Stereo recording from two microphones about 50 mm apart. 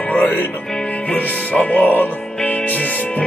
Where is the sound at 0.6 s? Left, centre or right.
Centre; by 2.2 s left.